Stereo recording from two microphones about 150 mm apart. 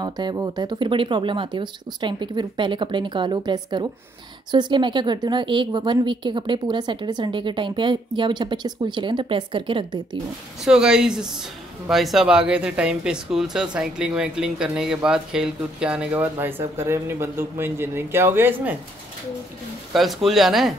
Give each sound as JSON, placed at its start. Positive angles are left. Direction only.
{"t": 0.0, "sound": "a woman's voice", "side_deg": -30}
{"t": 10.6, "sound": "speech", "side_deg": -5}
{"t": 19.9, "sound": "speech", "side_deg": 0}